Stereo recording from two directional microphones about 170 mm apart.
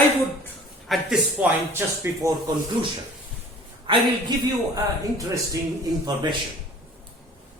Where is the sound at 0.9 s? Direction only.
5° right (ahead or behind).